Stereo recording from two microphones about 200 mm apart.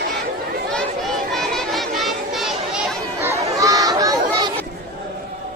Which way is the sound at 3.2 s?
15° right (ahead or behind).